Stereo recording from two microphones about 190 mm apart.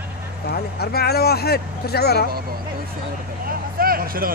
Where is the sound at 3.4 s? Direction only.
50° right (ahead or behind).